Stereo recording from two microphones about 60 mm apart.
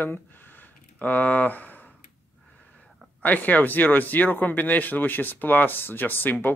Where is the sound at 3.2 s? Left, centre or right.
Left.